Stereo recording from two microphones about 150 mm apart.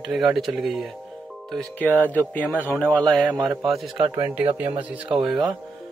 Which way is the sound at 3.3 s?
10° right (ahead or behind).